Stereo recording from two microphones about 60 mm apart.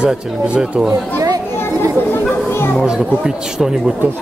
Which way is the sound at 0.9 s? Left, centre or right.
Right.